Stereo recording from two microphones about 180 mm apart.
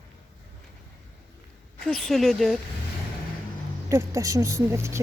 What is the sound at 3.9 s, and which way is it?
Speech, 15° right (ahead or behind).